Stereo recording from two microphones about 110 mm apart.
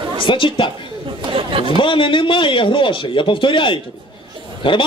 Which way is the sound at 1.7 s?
50° left (ahead or behind).